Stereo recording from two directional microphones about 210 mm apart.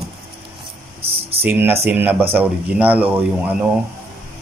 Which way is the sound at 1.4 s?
10° right (ahead or behind).